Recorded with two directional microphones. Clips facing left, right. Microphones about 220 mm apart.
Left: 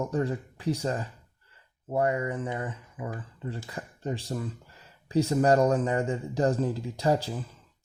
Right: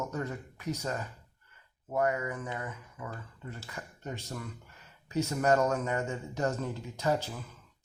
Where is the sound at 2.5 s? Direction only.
30° left (ahead or behind).